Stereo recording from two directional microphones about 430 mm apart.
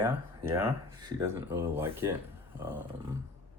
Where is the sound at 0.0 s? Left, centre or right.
Centre.